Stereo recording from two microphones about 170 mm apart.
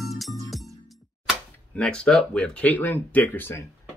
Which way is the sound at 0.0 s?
Centre (ahead or behind).